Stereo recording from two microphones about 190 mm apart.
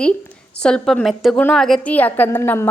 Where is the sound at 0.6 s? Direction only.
5° left (ahead or behind).